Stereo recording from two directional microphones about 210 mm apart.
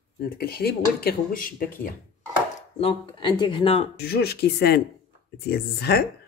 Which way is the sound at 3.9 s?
50° left (ahead or behind).